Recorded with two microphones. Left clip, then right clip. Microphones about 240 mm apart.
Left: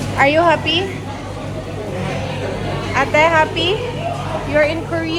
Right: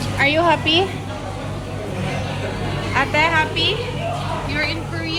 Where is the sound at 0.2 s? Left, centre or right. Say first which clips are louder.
Left 4 dB; centre.